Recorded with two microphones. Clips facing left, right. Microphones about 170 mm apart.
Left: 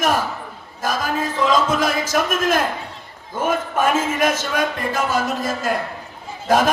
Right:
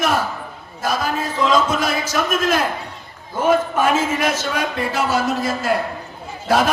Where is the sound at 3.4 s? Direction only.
45° left (ahead or behind).